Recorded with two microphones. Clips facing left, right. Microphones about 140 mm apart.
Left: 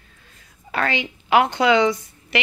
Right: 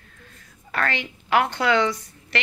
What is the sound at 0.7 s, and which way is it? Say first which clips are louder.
A woman's voice: left 3 dB; 15° left (ahead or behind).